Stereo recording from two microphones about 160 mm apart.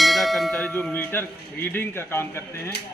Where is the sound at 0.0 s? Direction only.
Centre (ahead or behind); by 2.7 s 15° left (ahead or behind).